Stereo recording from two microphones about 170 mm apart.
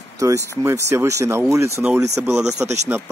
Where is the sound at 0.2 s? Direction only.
15° right (ahead or behind).